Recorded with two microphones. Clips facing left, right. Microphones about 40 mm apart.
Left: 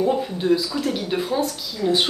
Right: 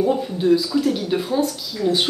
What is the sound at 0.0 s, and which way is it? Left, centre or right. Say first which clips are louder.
Speech: right 2 dB; centre.